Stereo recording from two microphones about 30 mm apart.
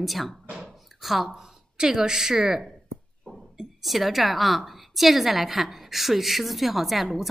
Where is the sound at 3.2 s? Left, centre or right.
Left.